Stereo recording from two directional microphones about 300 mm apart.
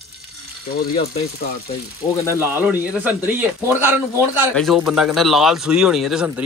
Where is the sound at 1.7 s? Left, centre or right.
Centre.